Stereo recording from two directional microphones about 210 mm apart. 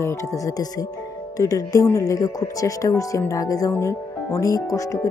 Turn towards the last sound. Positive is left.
turn(degrees=15)  # may be behind; listen again after turning